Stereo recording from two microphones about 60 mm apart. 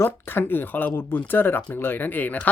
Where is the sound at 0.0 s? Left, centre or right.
Left.